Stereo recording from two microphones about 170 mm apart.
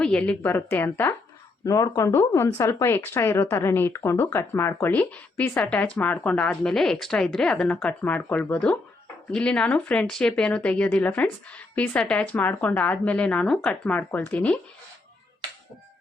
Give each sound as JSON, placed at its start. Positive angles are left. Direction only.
{"t": 0.0, "sound": "speech", "side_deg": 5}